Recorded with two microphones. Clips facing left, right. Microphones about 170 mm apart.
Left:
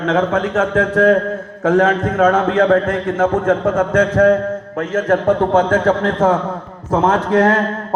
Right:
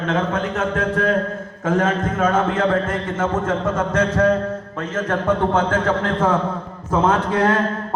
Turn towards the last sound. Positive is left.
turn(degrees=45)  # may be behind; listen again after turning